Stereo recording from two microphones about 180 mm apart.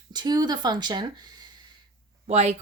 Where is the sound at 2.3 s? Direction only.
35° right (ahead or behind).